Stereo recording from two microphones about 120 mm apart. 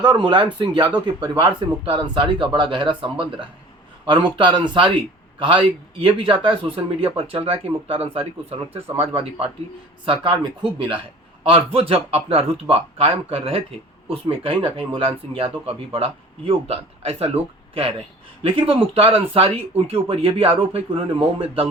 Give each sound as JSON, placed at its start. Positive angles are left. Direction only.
{"t": 0.0, "sound": "a man's voice", "side_deg": -40}
{"t": 18.4, "sound": "speech", "side_deg": -50}